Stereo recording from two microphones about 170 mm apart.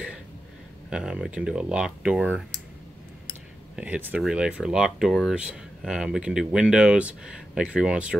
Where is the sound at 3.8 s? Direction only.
10° right (ahead or behind).